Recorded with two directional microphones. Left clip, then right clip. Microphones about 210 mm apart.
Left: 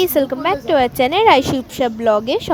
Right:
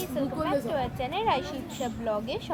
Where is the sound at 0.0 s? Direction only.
50° left (ahead or behind).